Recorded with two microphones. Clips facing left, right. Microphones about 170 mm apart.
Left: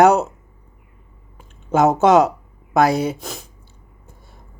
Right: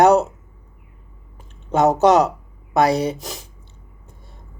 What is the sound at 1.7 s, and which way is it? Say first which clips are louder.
Speech: left 1 dB; centre (ahead or behind).